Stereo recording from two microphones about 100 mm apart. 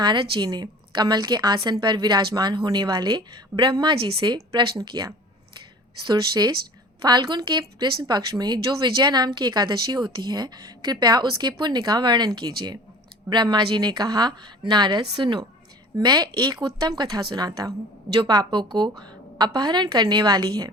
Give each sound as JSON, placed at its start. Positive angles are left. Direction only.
{"t": 0.0, "sound": "a woman's voice", "side_deg": -50}
{"t": 3.9, "sound": "a woman's voice", "side_deg": -65}
{"t": 4.5, "sound": "a woman's voice", "side_deg": -45}